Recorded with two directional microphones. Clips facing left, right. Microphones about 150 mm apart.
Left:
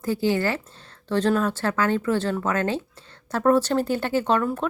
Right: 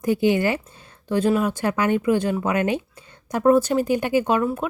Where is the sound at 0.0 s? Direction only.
20° right (ahead or behind).